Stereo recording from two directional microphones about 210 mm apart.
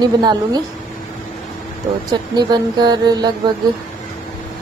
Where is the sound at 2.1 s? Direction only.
20° right (ahead or behind).